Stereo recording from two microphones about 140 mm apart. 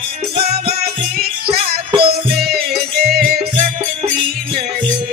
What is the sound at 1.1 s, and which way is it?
Music, 90° right.